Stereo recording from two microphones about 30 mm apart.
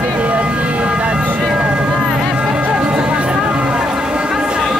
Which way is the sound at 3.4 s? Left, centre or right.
Right.